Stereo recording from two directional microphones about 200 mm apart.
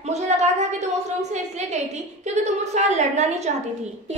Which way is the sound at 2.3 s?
35° right (ahead or behind).